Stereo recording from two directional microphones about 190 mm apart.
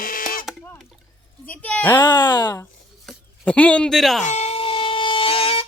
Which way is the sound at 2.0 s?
25° left (ahead or behind).